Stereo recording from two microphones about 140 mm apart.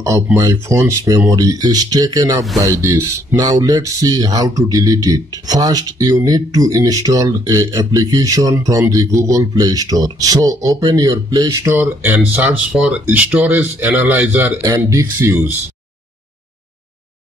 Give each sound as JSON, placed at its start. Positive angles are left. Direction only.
{"t": 0.4, "sound": "speech", "side_deg": -20}
{"t": 14.6, "sound": "speech", "side_deg": -25}